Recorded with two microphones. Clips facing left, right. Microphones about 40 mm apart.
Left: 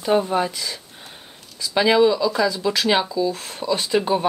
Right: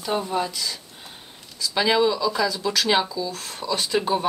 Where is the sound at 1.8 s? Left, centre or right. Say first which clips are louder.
Left 4 dB; centre.